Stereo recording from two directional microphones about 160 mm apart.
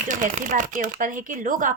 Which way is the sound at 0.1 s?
55° right (ahead or behind).